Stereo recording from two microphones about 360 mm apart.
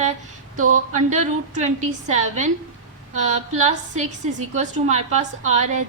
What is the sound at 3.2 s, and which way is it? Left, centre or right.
A woman's voice, centre.